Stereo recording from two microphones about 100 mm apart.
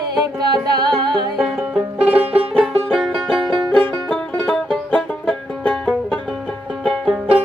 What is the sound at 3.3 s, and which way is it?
Music, 50° right (ahead or behind).